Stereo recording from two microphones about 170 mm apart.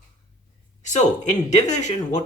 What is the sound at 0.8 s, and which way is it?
Speech, 45° left (ahead or behind).